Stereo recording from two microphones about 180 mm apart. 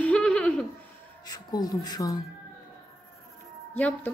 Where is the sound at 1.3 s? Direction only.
20° left (ahead or behind).